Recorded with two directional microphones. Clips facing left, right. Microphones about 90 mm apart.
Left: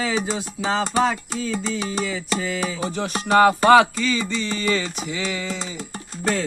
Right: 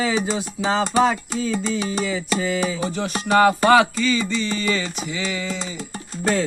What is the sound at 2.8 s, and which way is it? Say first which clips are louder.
Music: right 1 dB; 35° left (ahead or behind).